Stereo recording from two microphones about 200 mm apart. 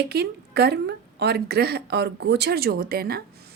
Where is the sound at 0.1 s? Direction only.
55° right (ahead or behind).